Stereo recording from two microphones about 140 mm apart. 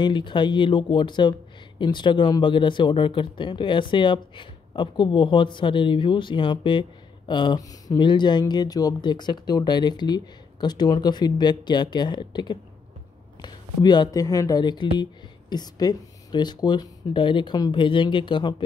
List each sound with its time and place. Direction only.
0.0 s speech: 35° left (ahead or behind)